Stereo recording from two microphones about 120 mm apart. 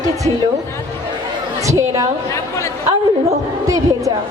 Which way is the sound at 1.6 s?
25° right (ahead or behind).